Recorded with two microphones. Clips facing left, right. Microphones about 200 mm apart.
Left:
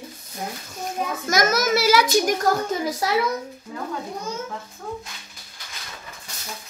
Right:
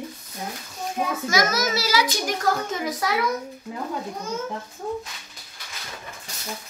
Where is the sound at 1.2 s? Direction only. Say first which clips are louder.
Left 4 dB; 45° left (ahead or behind).